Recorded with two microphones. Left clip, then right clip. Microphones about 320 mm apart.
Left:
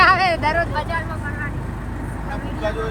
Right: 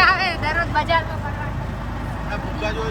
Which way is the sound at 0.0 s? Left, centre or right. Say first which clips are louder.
Left 3 dB; centre.